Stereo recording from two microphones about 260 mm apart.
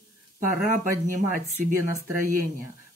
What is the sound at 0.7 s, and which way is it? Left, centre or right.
Speech, right.